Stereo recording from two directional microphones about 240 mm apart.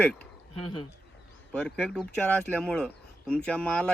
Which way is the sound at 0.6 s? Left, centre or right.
Left.